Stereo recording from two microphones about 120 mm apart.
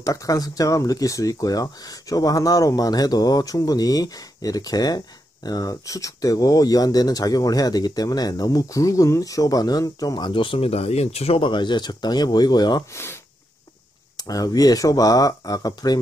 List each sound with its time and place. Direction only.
0.0 s speech: 25° left (ahead or behind)
12.9 s speech: 20° left (ahead or behind)
14.1 s speech: 30° left (ahead or behind)